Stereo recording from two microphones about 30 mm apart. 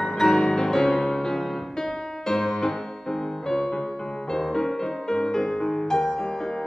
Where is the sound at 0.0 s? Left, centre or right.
Centre.